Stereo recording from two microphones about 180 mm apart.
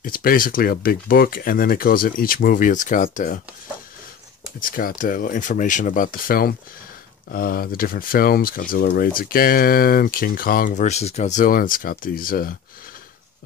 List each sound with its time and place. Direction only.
0.0 s speech: 55° left (ahead or behind)
4.6 s speech: 50° left (ahead or behind)